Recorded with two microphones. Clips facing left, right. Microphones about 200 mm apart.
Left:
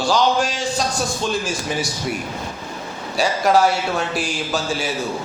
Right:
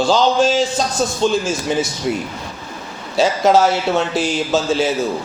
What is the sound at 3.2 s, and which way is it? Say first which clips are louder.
Speech: right 3 dB; 25° right (ahead or behind).